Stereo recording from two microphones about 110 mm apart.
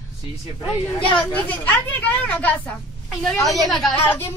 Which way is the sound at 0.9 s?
50° left (ahead or behind).